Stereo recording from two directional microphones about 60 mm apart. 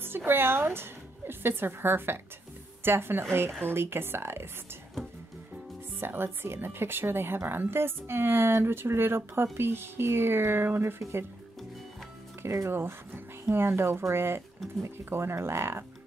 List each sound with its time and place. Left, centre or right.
0.0 s speech: right
5.9 s speech: right
12.4 s speech: right
14.6 s speech: centre
15.0 s speech: right